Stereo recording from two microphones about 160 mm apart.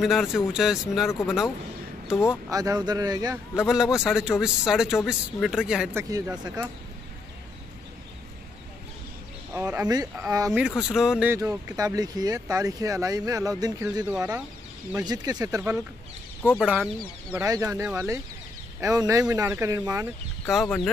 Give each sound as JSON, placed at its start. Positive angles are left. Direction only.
{"t": 0.0, "sound": "a man's voice", "side_deg": 0}
{"t": 2.5, "sound": "speech", "side_deg": -25}
{"t": 3.5, "sound": "a man's voice", "side_deg": -5}
{"t": 5.9, "sound": "speech", "side_deg": -20}
{"t": 9.5, "sound": "speech", "side_deg": -15}
{"t": 10.8, "sound": "a man's voice", "side_deg": -5}
{"t": 11.3, "sound": "speech", "side_deg": -20}
{"t": 15.0, "sound": "speech", "side_deg": -25}
{"t": 16.6, "sound": "a man's voice", "side_deg": -5}
{"t": 17.3, "sound": "speech", "side_deg": -15}
{"t": 20.4, "sound": "a man's voice", "side_deg": 0}